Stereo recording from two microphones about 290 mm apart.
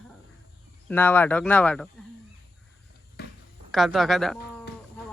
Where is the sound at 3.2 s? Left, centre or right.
Left.